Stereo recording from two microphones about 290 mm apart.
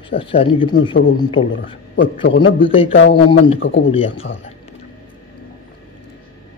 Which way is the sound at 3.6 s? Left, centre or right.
Left.